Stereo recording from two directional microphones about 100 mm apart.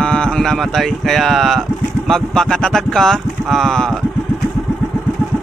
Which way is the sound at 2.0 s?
5° left (ahead or behind).